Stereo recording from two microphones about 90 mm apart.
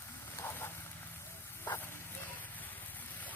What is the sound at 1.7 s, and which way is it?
Vehicle, 30° left (ahead or behind).